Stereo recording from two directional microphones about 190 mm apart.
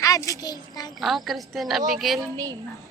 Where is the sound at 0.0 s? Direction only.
15° left (ahead or behind).